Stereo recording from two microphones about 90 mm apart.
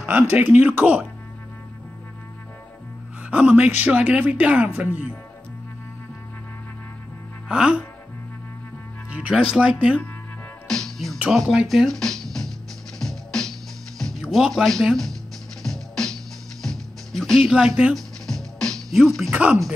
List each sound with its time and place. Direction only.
0.1 s speech: 20° right (ahead or behind)
3.3 s speech: 15° right (ahead or behind)
7.4 s speech: 10° right (ahead or behind)
9.1 s speech: 10° right (ahead or behind)
10.7 s speech: 5° left (ahead or behind)
13.0 s music: 5° left (ahead or behind)
14.3 s speech: centre (ahead or behind)
15.6 s music: 5° left (ahead or behind)
17.9 s music: 5° left (ahead or behind)
19.3 s speech: 15° right (ahead or behind)